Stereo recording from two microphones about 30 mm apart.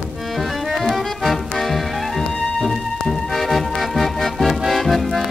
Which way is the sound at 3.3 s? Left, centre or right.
Centre.